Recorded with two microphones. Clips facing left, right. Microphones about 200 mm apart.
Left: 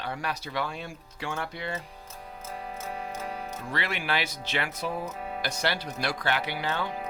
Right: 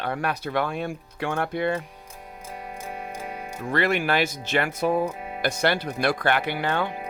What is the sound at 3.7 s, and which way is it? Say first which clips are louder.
Speech: right 8 dB; 50° right (ahead or behind).